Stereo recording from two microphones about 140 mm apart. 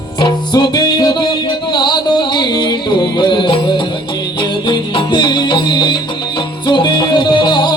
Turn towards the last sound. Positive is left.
turn(degrees=30)  # may be behind; listen again after turning